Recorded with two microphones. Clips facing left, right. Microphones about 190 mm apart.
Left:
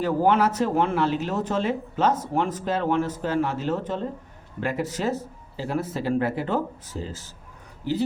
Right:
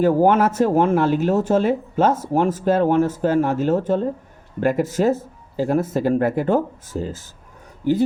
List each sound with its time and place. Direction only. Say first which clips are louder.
0.0 s speech: right 5 dB; 45° right (ahead or behind)